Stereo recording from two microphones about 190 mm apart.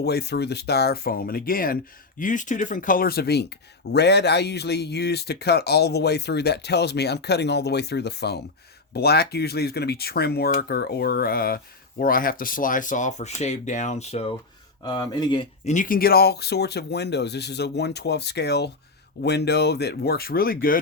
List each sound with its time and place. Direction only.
0.0 s speech: 60° left (ahead or behind); by 14.3 s 35° left (ahead or behind)
14.8 s speech: 20° left (ahead or behind)
15.6 s speech: 40° left (ahead or behind)